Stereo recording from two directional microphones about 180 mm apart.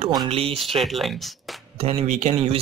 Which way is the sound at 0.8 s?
Centre (ahead or behind).